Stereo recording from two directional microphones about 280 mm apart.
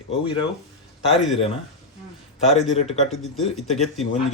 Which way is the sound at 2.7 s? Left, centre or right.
Left.